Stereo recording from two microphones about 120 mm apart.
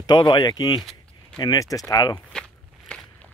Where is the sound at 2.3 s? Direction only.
5° left (ahead or behind).